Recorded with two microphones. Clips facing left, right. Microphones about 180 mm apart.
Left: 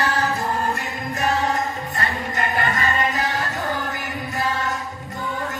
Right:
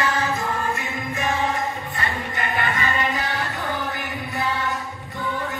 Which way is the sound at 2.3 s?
40° left (ahead or behind).